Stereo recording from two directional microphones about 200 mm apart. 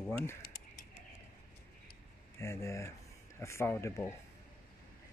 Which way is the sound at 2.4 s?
15° left (ahead or behind).